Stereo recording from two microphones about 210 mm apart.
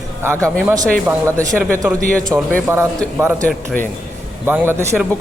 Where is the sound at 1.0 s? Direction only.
15° right (ahead or behind).